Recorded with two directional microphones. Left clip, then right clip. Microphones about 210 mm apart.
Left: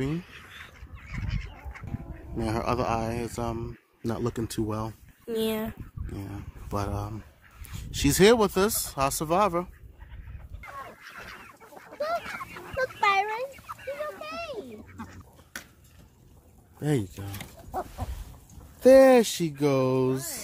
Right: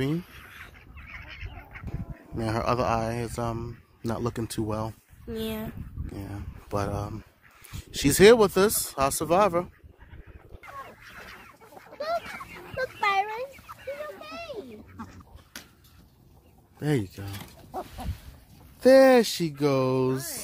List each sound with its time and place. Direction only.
0.6 s duck: 55° left (ahead or behind)
2.3 s a man's voice: 10° right (ahead or behind)
5.3 s speech: 45° left (ahead or behind)
6.1 s a man's voice: 10° right (ahead or behind)
11.2 s chicken: 15° right (ahead or behind)
13.0 s a sound: 35° right (ahead or behind)
13.7 s a sound: centre (ahead or behind)
16.8 s a sound: centre (ahead or behind)
18.8 s speech: centre (ahead or behind)